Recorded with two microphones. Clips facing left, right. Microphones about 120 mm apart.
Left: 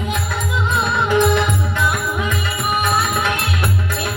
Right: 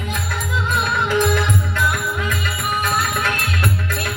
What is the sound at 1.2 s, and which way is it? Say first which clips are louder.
Music: left 3 dB; 15° left (ahead or behind).